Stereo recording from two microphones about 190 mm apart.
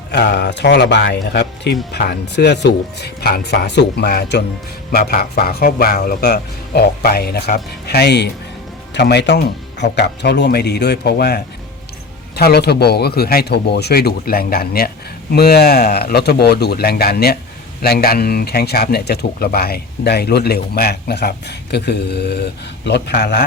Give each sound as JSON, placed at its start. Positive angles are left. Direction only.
{"t": 0.1, "sound": "speech", "side_deg": 60}